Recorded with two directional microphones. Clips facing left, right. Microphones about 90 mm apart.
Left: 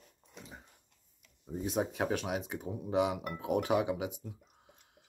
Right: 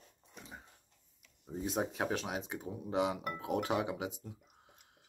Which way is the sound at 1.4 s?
Centre (ahead or behind).